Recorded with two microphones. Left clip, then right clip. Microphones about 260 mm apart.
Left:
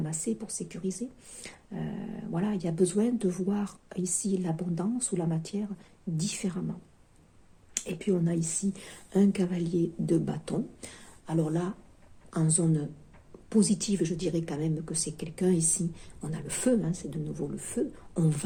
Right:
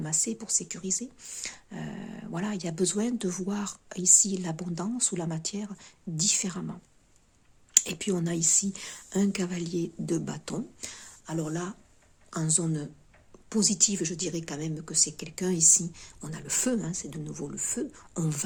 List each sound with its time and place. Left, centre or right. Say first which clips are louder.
0.0 s speech: right 2 dB; right